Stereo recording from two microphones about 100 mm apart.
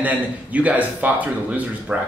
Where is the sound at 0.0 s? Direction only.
15° right (ahead or behind).